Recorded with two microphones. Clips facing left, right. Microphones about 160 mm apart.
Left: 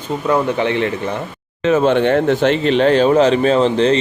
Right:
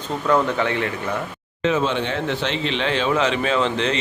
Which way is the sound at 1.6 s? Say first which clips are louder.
Left 8 dB; 55° left (ahead or behind).